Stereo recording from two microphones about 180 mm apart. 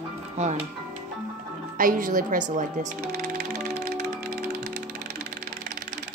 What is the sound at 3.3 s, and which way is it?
Music, 55° right (ahead or behind).